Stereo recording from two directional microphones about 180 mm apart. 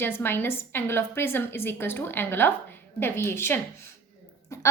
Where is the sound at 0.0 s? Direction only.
10° left (ahead or behind).